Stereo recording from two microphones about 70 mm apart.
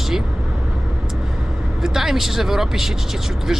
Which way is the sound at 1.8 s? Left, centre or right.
Centre.